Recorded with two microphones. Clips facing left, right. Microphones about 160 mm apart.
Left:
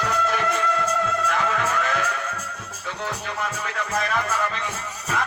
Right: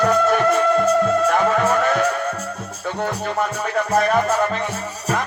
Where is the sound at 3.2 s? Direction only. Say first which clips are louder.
Right 7 dB; 40° right (ahead or behind).